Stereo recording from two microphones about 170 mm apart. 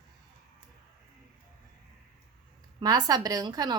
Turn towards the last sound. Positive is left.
turn(degrees=-25)  # may be behind; listen again after turning